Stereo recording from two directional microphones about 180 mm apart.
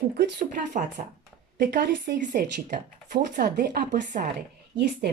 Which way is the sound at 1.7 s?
65° right (ahead or behind).